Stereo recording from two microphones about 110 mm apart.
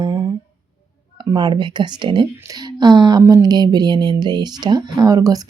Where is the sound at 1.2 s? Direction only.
45° right (ahead or behind).